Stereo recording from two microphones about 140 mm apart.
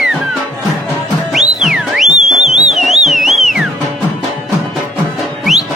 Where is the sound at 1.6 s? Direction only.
Centre (ahead or behind).